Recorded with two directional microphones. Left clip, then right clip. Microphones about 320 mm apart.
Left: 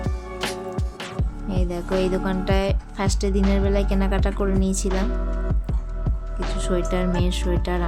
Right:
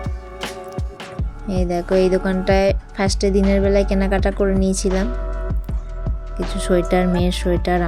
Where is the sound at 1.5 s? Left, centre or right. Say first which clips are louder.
Right 7 dB; centre.